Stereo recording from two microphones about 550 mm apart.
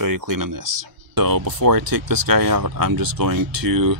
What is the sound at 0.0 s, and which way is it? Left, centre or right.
Speech, right.